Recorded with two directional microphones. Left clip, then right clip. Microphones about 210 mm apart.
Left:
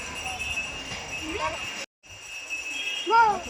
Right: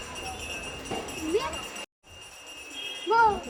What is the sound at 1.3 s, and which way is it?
Speech, 10° right (ahead or behind).